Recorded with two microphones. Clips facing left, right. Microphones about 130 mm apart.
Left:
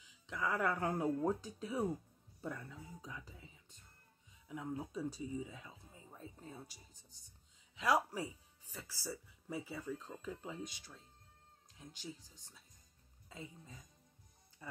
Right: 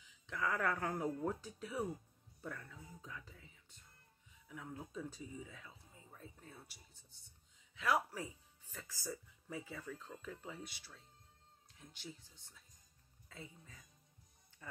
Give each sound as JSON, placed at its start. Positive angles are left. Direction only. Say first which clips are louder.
{"t": 0.3, "sound": "speech", "louder": "left 1 dB", "side_deg": 15}
{"t": 12.4, "sound": "speech", "louder": "left 2 dB", "side_deg": 15}